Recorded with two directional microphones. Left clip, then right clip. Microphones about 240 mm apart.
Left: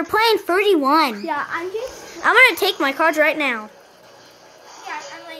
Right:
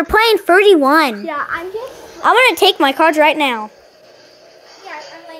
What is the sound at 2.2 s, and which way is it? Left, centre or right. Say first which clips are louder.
A woman's voice: right 3 dB; centre.